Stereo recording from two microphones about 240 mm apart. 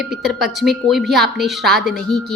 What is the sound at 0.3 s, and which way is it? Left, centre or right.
Speech, centre.